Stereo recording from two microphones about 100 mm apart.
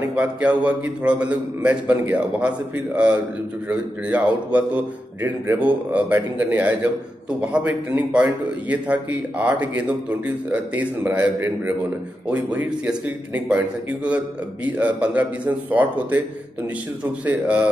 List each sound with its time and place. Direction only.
0.1 s a man's voice: 10° right (ahead or behind)
3.6 s a man's voice: 15° right (ahead or behind)
11.3 s a man's voice: 25° right (ahead or behind)
12.3 s a man's voice: 15° right (ahead or behind)